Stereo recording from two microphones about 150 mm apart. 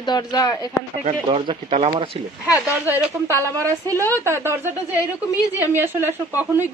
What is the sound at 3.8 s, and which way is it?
Speech, 20° right (ahead or behind).